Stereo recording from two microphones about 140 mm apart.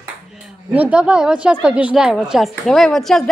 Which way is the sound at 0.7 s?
10° right (ahead or behind).